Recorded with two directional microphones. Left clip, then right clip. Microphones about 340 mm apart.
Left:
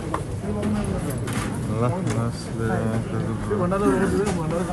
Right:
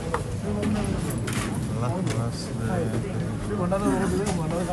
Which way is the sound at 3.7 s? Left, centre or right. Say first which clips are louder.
Left 3 dB; right.